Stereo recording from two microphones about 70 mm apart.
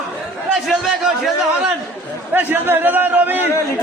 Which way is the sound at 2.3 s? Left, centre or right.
Right.